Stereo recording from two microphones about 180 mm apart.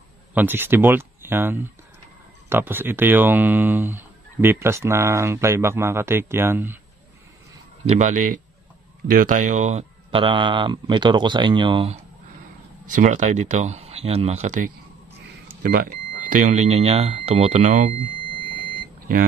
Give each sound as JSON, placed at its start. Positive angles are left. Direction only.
{"t": 0.3, "sound": "speech", "side_deg": -10}
{"t": 7.9, "sound": "speech", "side_deg": -45}
{"t": 12.8, "sound": "speech", "side_deg": -45}
{"t": 15.6, "sound": "speech", "side_deg": -50}